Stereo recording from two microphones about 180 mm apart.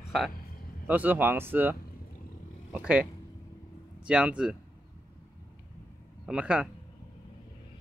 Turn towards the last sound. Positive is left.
turn(degrees=-5)  # may be behind; listen again after turning